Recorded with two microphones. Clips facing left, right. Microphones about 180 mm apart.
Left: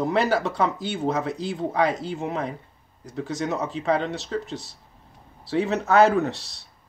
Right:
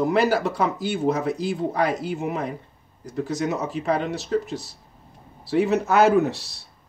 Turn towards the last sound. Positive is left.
turn(degrees=-5)  # may be behind; listen again after turning